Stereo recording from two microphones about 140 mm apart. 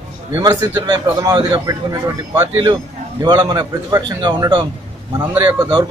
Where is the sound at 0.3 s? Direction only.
25° right (ahead or behind).